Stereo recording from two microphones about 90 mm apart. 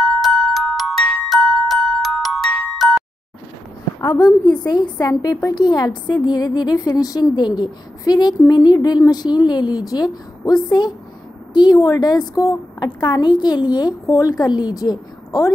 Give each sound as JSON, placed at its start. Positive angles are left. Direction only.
{"t": 0.0, "sound": "glockenspiel", "side_deg": 0}
{"t": 4.5, "sound": "a woman's voice", "side_deg": 50}